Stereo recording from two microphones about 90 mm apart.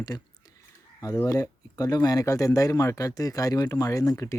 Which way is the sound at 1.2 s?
40° left (ahead or behind).